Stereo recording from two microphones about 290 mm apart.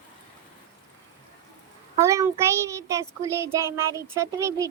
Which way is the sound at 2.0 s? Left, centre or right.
Centre.